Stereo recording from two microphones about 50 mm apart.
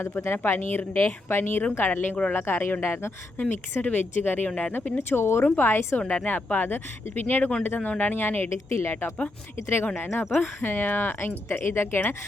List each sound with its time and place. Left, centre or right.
0.0 s speech: left
0.3 s speech: left
1.8 s speech: left
3.8 s speech: left
4.4 s speech: left
4.9 s speech: left
6.0 s speech: left
6.2 s speech: left
8.4 s speech: left